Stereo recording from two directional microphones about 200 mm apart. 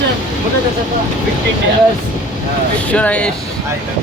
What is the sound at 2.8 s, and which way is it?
Speech, 5° left (ahead or behind).